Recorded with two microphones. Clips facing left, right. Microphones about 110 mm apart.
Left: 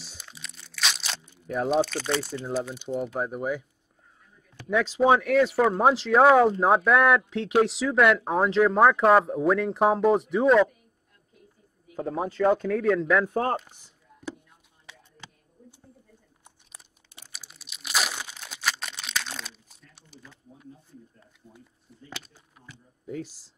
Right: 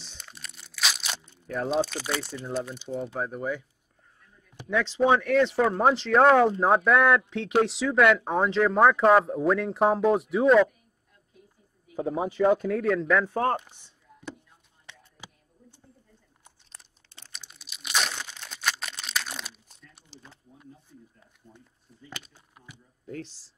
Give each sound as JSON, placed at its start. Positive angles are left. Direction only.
{"t": 0.0, "sound": "crunch", "side_deg": 5}
{"t": 1.3, "sound": "speech", "side_deg": 5}
{"t": 1.9, "sound": "speech", "side_deg": -5}
{"t": 4.6, "sound": "speech", "side_deg": 10}
{"t": 11.9, "sound": "speech", "side_deg": -15}
{"t": 12.5, "sound": "speech", "side_deg": -5}
{"t": 15.2, "sound": "a sound", "side_deg": -15}
{"t": 16.4, "sound": "crunch", "side_deg": 10}
{"t": 20.1, "sound": "a sound", "side_deg": -30}
{"t": 21.4, "sound": "a sound", "side_deg": 5}
{"t": 23.0, "sound": "speech", "side_deg": 10}